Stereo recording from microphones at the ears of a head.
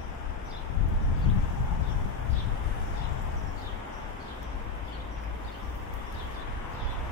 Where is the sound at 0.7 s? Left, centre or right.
Left.